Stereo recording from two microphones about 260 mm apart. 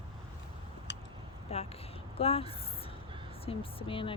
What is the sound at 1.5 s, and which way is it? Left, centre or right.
Speech, left.